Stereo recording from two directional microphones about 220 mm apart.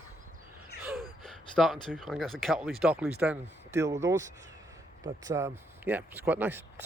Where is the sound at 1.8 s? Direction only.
Centre (ahead or behind).